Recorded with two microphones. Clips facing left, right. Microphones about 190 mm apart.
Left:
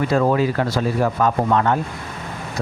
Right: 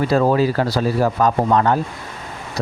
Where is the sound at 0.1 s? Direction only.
30° right (ahead or behind).